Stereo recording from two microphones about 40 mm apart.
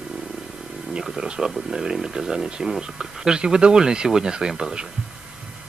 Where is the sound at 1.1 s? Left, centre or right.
Centre.